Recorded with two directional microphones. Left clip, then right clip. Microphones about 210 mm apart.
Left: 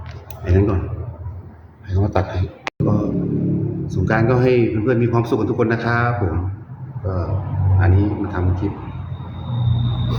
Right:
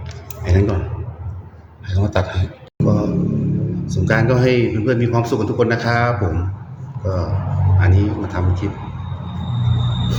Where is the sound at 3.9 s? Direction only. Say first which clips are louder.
Right 1 dB; 5° left (ahead or behind).